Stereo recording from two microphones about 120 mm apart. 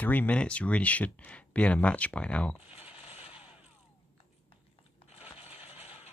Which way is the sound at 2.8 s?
50° left (ahead or behind).